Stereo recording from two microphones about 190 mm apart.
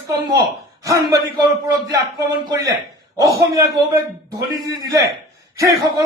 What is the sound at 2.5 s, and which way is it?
A man's voice, 15° right (ahead or behind).